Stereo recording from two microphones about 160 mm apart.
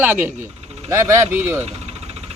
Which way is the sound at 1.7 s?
40° right (ahead or behind).